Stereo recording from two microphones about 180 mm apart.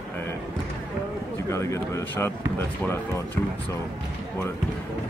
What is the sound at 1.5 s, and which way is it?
Speech, 15° left (ahead or behind).